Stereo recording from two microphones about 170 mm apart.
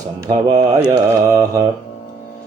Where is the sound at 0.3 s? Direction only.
25° right (ahead or behind).